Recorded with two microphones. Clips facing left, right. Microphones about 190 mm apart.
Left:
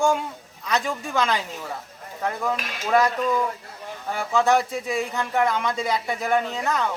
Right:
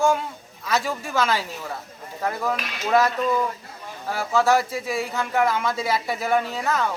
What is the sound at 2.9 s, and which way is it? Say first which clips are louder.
Speech: even; 5° right (ahead or behind).